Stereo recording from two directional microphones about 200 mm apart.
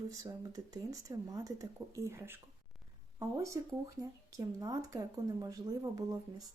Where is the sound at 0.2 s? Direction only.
15° right (ahead or behind).